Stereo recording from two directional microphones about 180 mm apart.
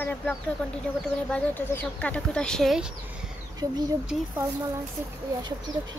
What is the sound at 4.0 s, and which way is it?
Speech, 5° right (ahead or behind).